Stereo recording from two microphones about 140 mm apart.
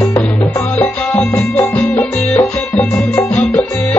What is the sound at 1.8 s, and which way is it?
Music, 10° left (ahead or behind).